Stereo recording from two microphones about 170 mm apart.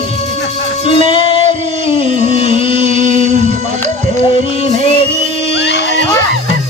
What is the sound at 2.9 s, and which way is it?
Music, 45° right (ahead or behind).